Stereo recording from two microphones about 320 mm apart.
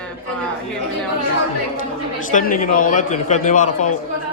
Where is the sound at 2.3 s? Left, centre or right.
Left.